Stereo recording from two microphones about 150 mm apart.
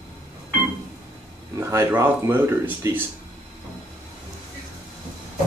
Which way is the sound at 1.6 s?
15° right (ahead or behind).